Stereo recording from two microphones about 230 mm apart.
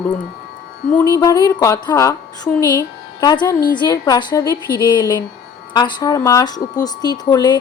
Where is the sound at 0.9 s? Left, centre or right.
Centre.